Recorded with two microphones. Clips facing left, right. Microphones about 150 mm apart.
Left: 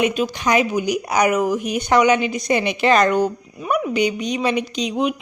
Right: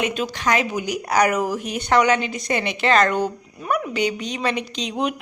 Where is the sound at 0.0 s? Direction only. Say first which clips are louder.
Left 4 dB; 15° left (ahead or behind).